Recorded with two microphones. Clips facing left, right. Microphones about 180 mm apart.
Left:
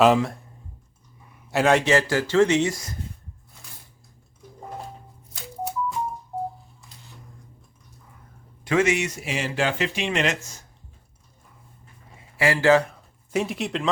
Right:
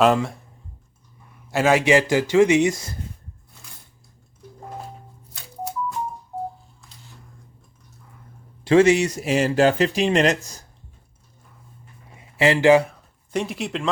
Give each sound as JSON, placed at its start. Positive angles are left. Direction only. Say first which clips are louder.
{"t": 0.0, "sound": "speech", "louder": "even", "side_deg": 0}
{"t": 1.5, "sound": "a man's voice", "louder": "right 1 dB", "side_deg": 0}
{"t": 1.8, "sound": "speech", "louder": "right 3 dB", "side_deg": -15}
{"t": 8.6, "sound": "speech", "louder": "right 6 dB", "side_deg": -30}
{"t": 12.1, "sound": "a sound", "louder": "right 4 dB", "side_deg": -20}
{"t": 12.9, "sound": "speech", "louder": "even", "side_deg": 0}